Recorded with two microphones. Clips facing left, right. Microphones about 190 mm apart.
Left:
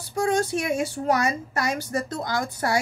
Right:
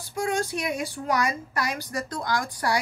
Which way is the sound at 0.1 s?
30° left (ahead or behind).